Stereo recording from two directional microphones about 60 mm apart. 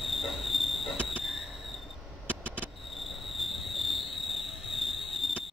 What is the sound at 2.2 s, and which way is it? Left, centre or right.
Vehicle, right.